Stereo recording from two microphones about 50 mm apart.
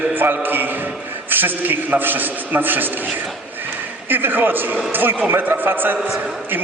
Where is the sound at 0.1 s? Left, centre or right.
Right.